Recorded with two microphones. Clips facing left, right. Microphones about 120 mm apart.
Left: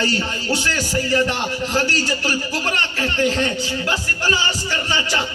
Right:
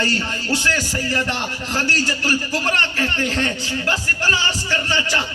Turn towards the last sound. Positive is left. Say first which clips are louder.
# even
turn(degrees=15)  # may be behind; listen again after turning